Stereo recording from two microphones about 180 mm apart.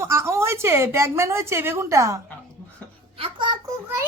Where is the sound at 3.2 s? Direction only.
30° right (ahead or behind).